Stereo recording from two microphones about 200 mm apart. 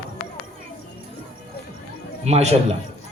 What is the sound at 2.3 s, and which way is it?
Speech, 30° right (ahead or behind).